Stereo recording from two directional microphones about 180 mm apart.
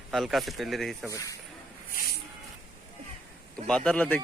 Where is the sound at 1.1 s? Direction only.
20° left (ahead or behind).